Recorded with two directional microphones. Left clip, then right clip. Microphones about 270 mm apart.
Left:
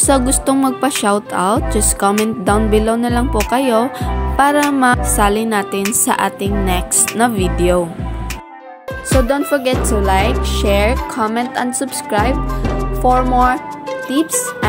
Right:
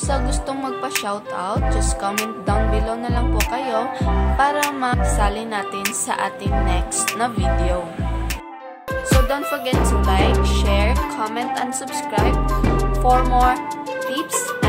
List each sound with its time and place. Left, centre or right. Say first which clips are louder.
0.0 s music: left 9 dB; left
9.3 s music: left 6 dB; centre
13.0 s speech: left 4 dB; centre